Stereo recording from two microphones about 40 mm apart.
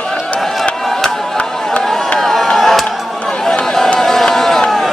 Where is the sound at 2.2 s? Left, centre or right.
Centre.